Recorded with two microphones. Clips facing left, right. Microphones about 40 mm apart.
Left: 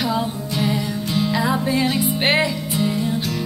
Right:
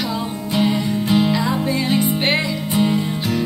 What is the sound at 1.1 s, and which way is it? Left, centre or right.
Music, centre.